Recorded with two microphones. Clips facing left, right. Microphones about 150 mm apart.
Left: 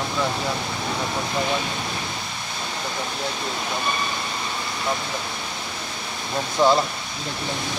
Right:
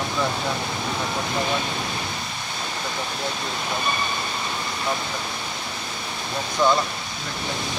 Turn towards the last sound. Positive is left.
turn(degrees=25)  # may be behind; listen again after turning